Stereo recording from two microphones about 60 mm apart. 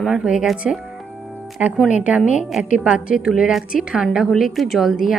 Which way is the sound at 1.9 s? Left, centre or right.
Right.